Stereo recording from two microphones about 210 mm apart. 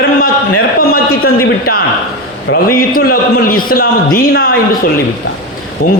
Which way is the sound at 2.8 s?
45° left (ahead or behind).